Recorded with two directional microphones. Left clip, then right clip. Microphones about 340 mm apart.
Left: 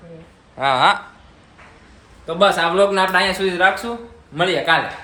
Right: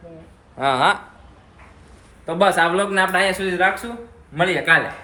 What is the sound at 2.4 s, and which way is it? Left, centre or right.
Speech, centre.